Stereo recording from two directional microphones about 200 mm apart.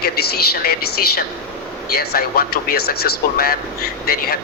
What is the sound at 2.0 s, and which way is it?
Speech, 50° left (ahead or behind).